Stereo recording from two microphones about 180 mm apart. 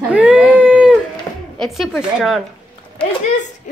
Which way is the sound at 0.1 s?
5° right (ahead or behind).